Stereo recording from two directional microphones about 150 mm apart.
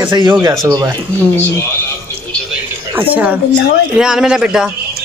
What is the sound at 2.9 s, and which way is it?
Speech, 10° right (ahead or behind).